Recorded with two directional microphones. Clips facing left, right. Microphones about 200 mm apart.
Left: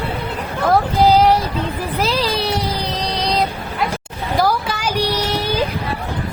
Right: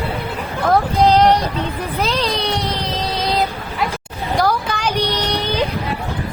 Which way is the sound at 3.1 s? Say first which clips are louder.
Even; centre (ahead or behind).